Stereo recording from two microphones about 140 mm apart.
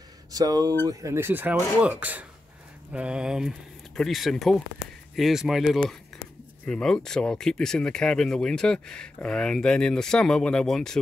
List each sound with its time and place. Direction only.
0.3 s speech: 25° right (ahead or behind); by 11.0 s 5° left (ahead or behind)